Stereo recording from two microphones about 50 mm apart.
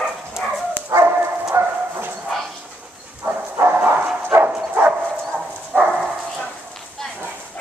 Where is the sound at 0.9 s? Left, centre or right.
Right.